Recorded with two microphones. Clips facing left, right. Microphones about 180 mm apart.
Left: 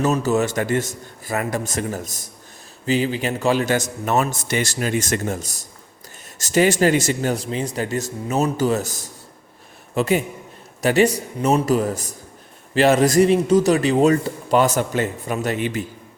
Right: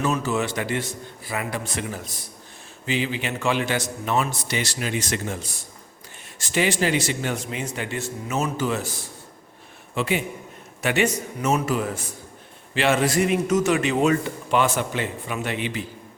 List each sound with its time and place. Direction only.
0.0 s a man's voice: 40° left (ahead or behind)